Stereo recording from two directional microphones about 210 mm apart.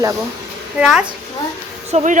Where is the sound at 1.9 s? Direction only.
30° right (ahead or behind).